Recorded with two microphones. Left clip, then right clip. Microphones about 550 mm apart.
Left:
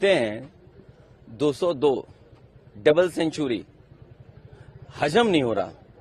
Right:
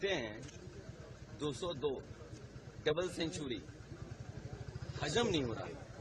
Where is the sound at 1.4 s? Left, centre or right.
Left.